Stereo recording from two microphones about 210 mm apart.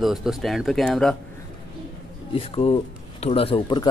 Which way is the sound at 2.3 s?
25° left (ahead or behind).